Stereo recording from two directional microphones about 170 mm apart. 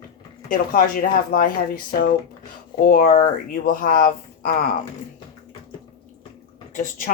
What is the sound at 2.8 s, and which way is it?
Speech, 60° left (ahead or behind).